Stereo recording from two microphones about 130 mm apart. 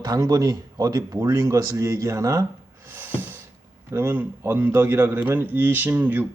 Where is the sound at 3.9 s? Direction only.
15° right (ahead or behind).